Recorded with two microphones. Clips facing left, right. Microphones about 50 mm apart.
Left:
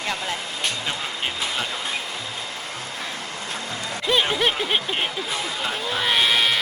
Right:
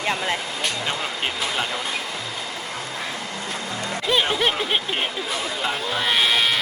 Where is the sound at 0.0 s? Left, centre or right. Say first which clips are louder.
Right 3 dB; right.